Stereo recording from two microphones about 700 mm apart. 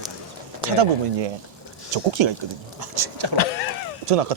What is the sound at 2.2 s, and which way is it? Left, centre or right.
Speech, right.